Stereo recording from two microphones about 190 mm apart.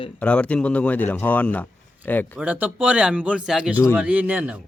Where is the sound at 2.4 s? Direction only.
5° right (ahead or behind).